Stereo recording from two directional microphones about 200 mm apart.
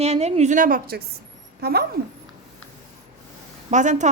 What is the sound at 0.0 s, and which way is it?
A woman's voice, 35° right (ahead or behind).